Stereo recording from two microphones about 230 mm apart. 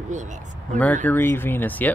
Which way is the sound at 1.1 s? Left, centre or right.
Centre.